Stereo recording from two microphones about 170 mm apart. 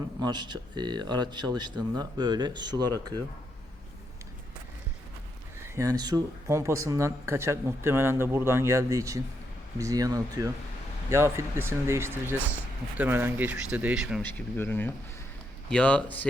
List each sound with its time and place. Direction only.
0.2 s speech: 25° right (ahead or behind)
5.6 s speech: 20° right (ahead or behind)
14.2 s speech: 10° left (ahead or behind)